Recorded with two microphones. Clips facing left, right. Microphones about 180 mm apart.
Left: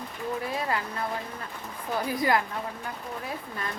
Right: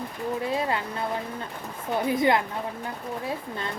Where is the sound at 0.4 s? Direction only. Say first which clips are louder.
Right 5 dB; 25° right (ahead or behind).